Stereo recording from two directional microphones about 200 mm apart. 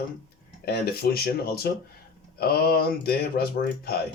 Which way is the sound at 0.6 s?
55° left (ahead or behind).